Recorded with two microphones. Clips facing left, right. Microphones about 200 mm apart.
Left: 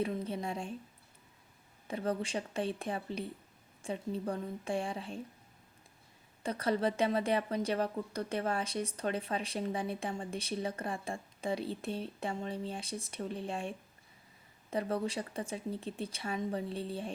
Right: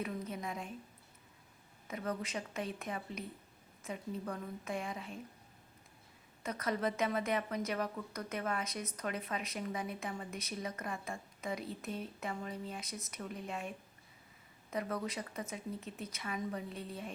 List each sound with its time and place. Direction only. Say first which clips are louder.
0.0 s a sound: left 5 dB; 30° left (ahead or behind)
1.9 s a woman's voice: left 5 dB; 30° left (ahead or behind)
6.4 s a woman's voice: left 4 dB; 30° left (ahead or behind)